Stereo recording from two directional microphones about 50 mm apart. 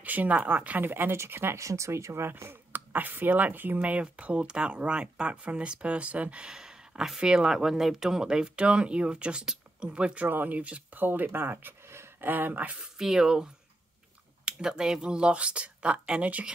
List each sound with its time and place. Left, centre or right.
0.0 s speech: right
1.1 s speech: right
1.6 s speech: right
2.2 s speech: right
2.7 s speech: right
3.8 s speech: right
6.4 s speech: centre
10.2 s speech: right
11.0 s speech: right
11.9 s a sound: right
12.3 s speech: right
12.8 s speech: centre; by 16.5 s right